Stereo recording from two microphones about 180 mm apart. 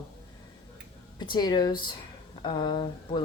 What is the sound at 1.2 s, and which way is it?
Speech, 25° left (ahead or behind).